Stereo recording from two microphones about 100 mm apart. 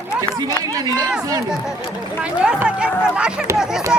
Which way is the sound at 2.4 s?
10° right (ahead or behind).